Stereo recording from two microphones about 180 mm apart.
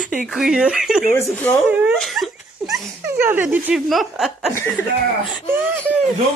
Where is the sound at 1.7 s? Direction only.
10° right (ahead or behind).